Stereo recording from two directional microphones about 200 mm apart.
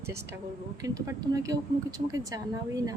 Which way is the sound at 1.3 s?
15° right (ahead or behind).